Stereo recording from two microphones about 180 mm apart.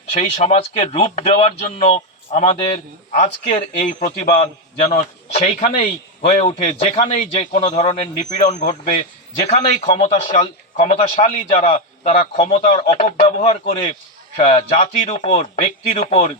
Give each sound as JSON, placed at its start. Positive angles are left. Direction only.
{"t": 0.1, "sound": "a man's voice", "side_deg": 35}
{"t": 3.1, "sound": "a man's voice", "side_deg": 45}